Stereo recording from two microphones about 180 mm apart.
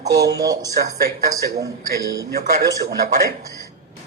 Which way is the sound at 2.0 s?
20° right (ahead or behind).